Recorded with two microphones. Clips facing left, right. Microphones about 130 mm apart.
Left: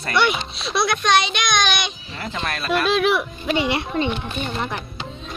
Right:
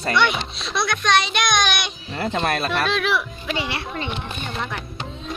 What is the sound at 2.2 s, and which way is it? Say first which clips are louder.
Speech: right 5 dB; 40° right (ahead or behind).